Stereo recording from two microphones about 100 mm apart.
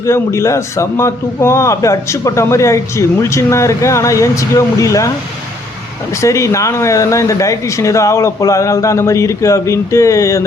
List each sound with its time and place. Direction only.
0.0 s a man's voice: 30° left (ahead or behind)
6.2 s speech: 30° left (ahead or behind)